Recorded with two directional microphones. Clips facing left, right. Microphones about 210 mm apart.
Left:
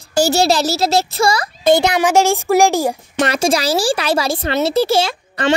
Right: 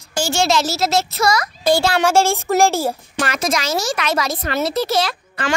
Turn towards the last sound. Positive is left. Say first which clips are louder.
# left 6 dB
turn(degrees=30)  # may be behind; listen again after turning